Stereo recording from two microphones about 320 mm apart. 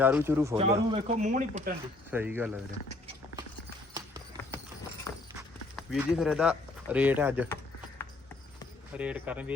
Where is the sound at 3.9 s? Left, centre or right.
Centre.